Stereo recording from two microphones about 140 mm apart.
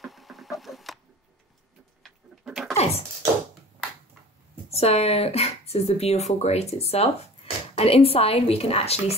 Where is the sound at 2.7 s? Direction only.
50° left (ahead or behind).